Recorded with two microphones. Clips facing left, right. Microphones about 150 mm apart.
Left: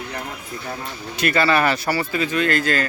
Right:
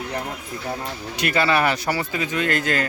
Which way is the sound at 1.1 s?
15° right (ahead or behind).